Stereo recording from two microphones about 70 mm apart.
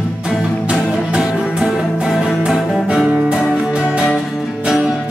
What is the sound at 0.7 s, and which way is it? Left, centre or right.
Music, centre.